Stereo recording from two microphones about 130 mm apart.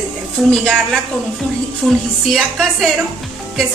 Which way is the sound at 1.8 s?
Centre (ahead or behind).